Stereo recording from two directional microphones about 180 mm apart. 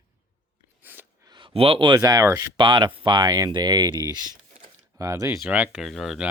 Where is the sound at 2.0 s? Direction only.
15° right (ahead or behind).